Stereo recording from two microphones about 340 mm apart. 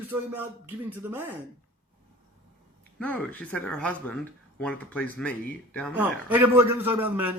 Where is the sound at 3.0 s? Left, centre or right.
Centre.